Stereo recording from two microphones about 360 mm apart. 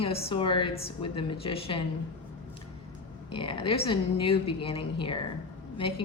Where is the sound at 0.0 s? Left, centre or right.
Centre.